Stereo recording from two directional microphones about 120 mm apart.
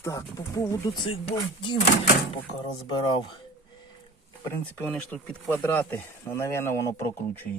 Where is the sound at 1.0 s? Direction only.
50° left (ahead or behind).